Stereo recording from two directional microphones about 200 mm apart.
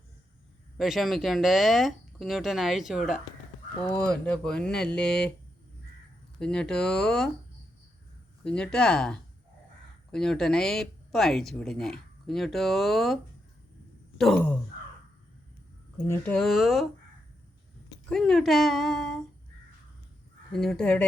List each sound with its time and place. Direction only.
0.8 s speech: centre (ahead or behind)
6.4 s speech: 5° left (ahead or behind)
8.4 s speech: 5° left (ahead or behind)
14.2 s speech: 5° left (ahead or behind)
16.0 s speech: 10° left (ahead or behind)
18.1 s speech: centre (ahead or behind)
20.5 s speech: centre (ahead or behind)